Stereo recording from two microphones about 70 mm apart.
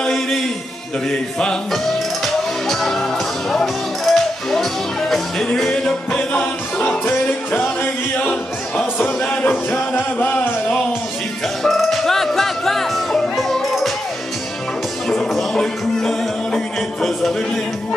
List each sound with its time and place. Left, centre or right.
0.0 s a sound: centre
1.4 s music: centre
11.6 s music: centre
15.0 s music: centre